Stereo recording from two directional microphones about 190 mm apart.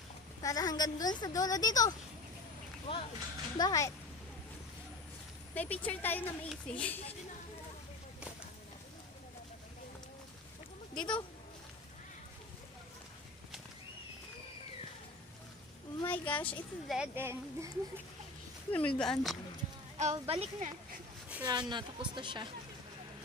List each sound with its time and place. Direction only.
0.4 s a woman's voice: 20° left (ahead or behind)
5.5 s speech: 10° left (ahead or behind)
11.0 s a woman's voice: 25° left (ahead or behind)
16.0 s speech: 10° left (ahead or behind); by 17.7 s 15° right (ahead or behind)
18.7 s speech: 5° left (ahead or behind)
20.0 s speech: 35° right (ahead or behind)
21.5 s a woman's voice: 20° right (ahead or behind)